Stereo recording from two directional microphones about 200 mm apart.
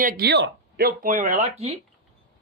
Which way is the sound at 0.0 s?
55° right (ahead or behind).